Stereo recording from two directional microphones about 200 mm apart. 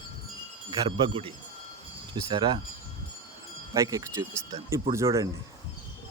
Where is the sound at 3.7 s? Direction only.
20° right (ahead or behind).